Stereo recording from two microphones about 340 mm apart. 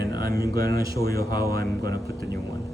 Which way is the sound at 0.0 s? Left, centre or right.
Right.